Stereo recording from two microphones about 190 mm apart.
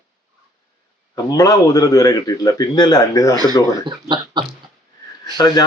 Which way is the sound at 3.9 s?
25° right (ahead or behind).